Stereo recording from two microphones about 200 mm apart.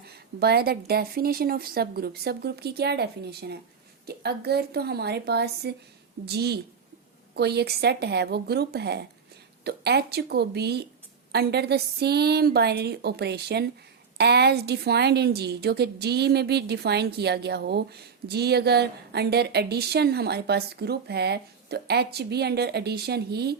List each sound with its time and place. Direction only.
0.0 s a woman's voice: 50° right (ahead or behind)